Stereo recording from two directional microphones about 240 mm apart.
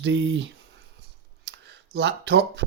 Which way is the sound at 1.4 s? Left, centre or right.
Right.